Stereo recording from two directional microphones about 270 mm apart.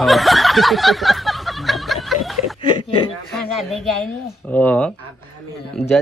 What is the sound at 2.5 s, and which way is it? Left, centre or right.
Chuckle, centre.